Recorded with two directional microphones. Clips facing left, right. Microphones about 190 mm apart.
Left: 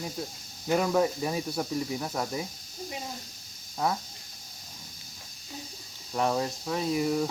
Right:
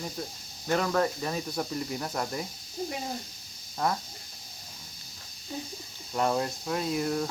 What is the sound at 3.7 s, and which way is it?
Speech, 5° left (ahead or behind).